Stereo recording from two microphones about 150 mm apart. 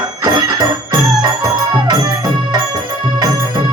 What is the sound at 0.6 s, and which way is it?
Music, 25° right (ahead or behind).